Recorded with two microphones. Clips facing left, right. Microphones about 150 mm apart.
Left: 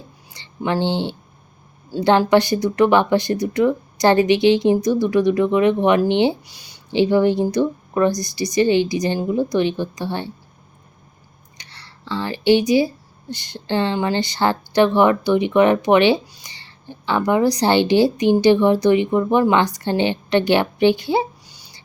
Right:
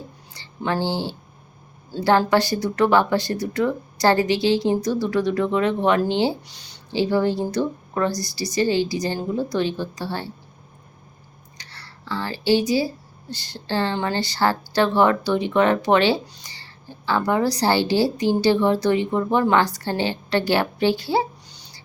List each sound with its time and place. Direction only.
0.3 s speech: 20° left (ahead or behind)
11.5 s speech: 15° left (ahead or behind)